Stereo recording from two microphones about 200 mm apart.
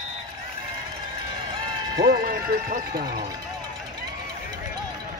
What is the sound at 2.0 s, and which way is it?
Speech, 45° right (ahead or behind).